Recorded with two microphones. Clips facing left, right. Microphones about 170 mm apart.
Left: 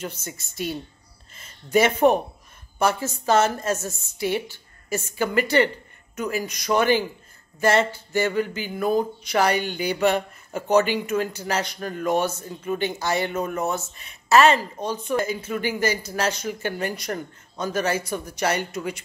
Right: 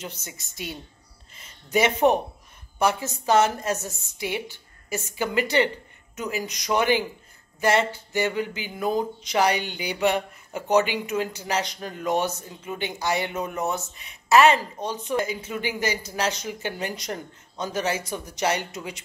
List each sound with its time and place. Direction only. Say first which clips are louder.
0.0 s speech: left 4 dB; 15° right (ahead or behind)
1.3 s speech: left 4 dB; 15° right (ahead or behind)